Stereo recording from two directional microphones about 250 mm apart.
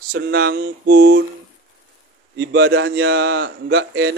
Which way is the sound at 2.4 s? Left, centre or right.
Right.